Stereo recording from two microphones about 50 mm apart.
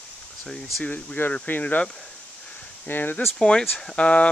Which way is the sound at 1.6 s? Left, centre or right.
Left.